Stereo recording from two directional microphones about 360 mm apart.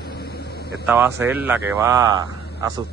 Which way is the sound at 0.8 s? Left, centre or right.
Centre.